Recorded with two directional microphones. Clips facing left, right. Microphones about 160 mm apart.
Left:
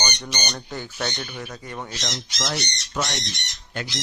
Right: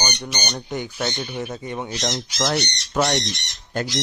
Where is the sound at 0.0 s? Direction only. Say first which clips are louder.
Right 2 dB; 10° right (ahead or behind).